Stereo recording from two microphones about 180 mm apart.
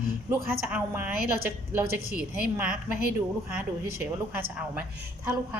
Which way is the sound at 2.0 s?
55° right (ahead or behind).